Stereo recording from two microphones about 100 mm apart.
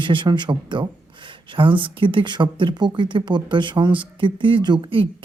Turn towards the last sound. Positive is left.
turn(degrees=-60)  # may be behind; listen again after turning